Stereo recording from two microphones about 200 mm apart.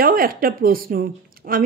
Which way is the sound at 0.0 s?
45° right (ahead or behind).